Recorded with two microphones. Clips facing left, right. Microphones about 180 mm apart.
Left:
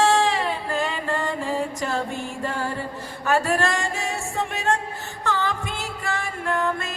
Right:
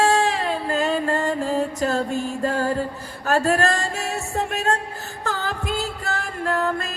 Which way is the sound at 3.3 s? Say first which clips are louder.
Right 2 dB; 40° right (ahead or behind).